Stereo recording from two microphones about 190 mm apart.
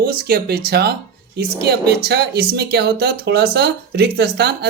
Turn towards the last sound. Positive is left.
turn(degrees=-60)  # may be behind; listen again after turning